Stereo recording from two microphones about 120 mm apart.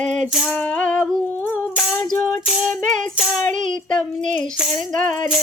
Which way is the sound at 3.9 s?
5° left (ahead or behind).